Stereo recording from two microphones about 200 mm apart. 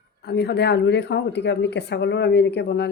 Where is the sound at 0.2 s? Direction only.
55° left (ahead or behind).